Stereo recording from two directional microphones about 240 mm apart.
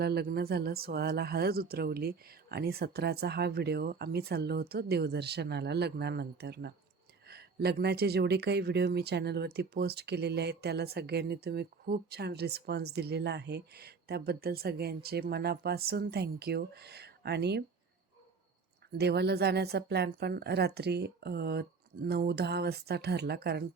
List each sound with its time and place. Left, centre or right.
0.0 s speech: right
18.9 s speech: right